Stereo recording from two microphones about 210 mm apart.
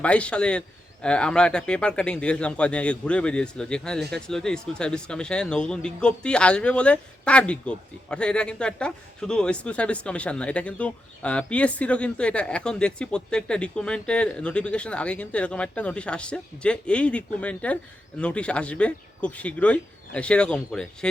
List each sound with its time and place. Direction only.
0.0 s speech: 5° left (ahead or behind)